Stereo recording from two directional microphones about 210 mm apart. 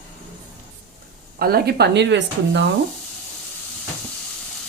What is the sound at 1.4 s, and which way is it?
Speech, 45° right (ahead or behind).